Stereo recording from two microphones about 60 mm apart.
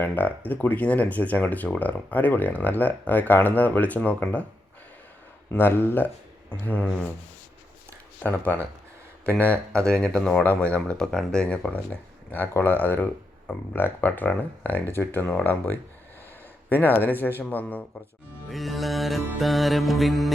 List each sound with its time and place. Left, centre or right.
0.0 s speech: left
5.5 s a man's voice: left
8.3 s speech: left
9.8 s speech: centre
10.4 s a man's voice: left
18.5 s music: centre